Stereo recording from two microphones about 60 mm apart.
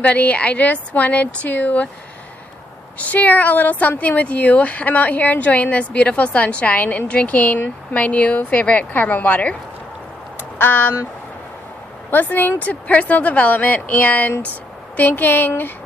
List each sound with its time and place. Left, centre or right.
0.0 s a woman's voice: left
3.0 s a woman's voice: left
10.6 s a woman's voice: left
12.1 s a woman's voice: left